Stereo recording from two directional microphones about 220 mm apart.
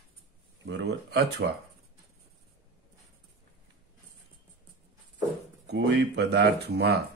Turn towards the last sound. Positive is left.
turn(degrees=-50)  # may be behind; listen again after turning